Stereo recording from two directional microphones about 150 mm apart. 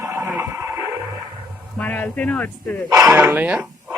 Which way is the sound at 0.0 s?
15° right (ahead or behind).